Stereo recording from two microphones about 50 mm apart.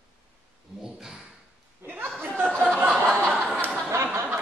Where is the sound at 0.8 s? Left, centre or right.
Centre.